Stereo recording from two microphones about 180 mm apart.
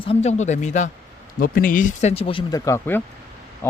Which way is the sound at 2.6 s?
15° left (ahead or behind).